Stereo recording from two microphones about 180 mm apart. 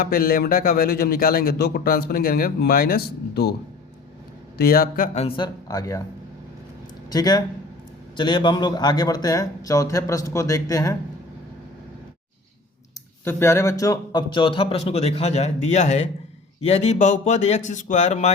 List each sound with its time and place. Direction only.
0.0 s a man's voice: 55° left (ahead or behind)
4.5 s a man's voice: 55° left (ahead or behind)
5.1 s a man's voice: 35° left (ahead or behind)
5.6 s a man's voice: 20° left (ahead or behind)
7.1 s a man's voice: 20° left (ahead or behind)
13.2 s a man's voice: 15° left (ahead or behind); by 18.3 s 40° left (ahead or behind)